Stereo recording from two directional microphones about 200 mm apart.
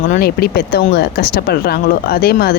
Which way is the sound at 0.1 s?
50° left (ahead or behind).